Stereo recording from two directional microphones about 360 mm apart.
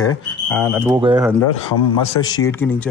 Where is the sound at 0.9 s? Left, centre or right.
Centre.